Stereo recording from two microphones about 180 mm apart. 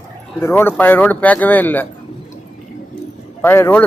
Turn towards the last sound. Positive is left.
turn(degrees=10)  # may be behind; listen again after turning